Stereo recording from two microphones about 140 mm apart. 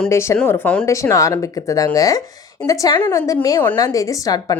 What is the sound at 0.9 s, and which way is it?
Speech, 20° left (ahead or behind).